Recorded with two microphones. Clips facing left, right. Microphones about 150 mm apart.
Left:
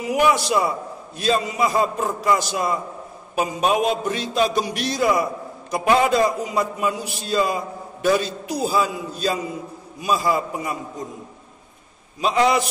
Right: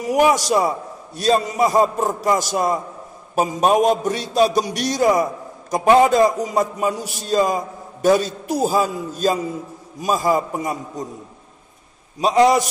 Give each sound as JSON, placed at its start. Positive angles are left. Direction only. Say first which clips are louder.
{"t": 0.0, "sound": "a man's voice", "louder": "right 3 dB", "side_deg": -45}
{"t": 12.2, "sound": "a man's voice", "louder": "right 4 dB", "side_deg": -40}